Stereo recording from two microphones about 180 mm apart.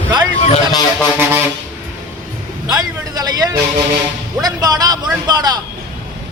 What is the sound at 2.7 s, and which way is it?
A man's voice, 20° right (ahead or behind).